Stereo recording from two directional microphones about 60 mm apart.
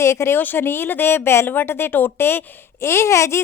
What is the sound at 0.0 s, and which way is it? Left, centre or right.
Speech, left.